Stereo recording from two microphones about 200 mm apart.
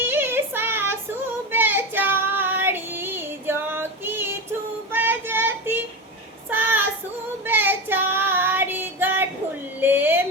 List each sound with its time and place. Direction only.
0.0 s child singing: 10° right (ahead or behind)
7.4 s female singing: 10° right (ahead or behind)
9.8 s a sound: 10° right (ahead or behind)